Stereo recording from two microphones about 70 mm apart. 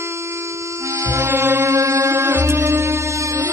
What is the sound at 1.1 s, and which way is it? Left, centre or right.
Music, right.